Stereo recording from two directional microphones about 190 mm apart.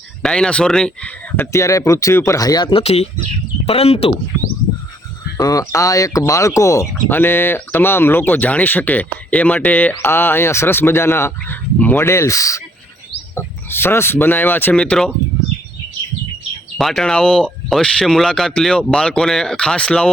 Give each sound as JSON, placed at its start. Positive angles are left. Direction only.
{"t": 0.2, "sound": "speech", "side_deg": 5}
{"t": 5.4, "sound": "speech", "side_deg": 20}
{"t": 16.7, "sound": "speech", "side_deg": 0}